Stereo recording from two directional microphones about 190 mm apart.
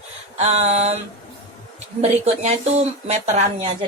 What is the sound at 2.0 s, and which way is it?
Speech, 35° right (ahead or behind).